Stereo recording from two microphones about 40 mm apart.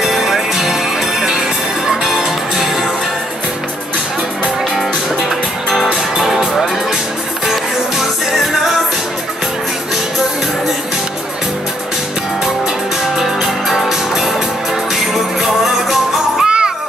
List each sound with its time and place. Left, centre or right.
0.0 s music: centre
2.0 s music: centre
6.2 s music: centre
13.2 s music: centre
15.4 s music: centre
16.4 s music: right